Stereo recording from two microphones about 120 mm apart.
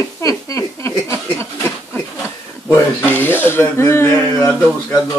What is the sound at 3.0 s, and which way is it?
Speech, 15° left (ahead or behind).